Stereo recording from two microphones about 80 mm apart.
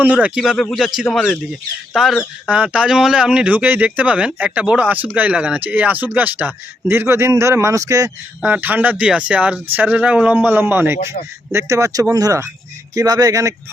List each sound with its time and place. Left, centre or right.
0.0 s speech: centre
2.5 s speech: centre; by 8.1 s right
8.4 s speech: centre
11.5 s speech: right